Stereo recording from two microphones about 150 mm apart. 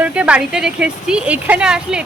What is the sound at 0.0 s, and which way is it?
Speech, 10° right (ahead or behind).